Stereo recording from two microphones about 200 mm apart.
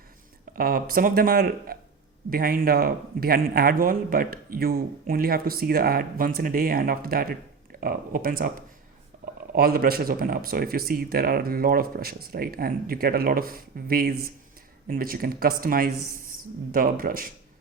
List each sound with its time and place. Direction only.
0.5 s speech: 45° right (ahead or behind)